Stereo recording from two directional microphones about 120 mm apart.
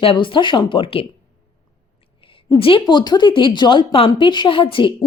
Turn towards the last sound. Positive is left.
turn(degrees=45)  # may be behind; listen again after turning